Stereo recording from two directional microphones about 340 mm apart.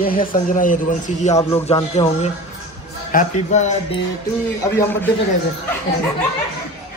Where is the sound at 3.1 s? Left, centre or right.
Left.